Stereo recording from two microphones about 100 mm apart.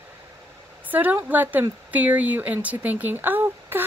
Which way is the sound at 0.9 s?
15° right (ahead or behind).